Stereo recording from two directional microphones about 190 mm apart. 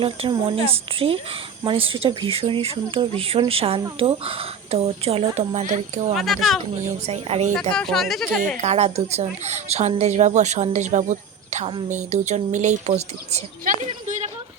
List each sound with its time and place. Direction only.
0.0 s speech: 30° right (ahead or behind)
6.1 s speech: centre (ahead or behind)
7.1 s speech: 35° right (ahead or behind)
7.5 s speech: 5° left (ahead or behind)
8.6 s speech: 35° right (ahead or behind)